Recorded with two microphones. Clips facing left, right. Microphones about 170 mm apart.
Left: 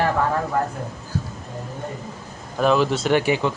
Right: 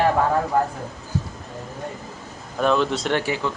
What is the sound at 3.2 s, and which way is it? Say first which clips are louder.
Speech: left 4 dB; 20° left (ahead or behind).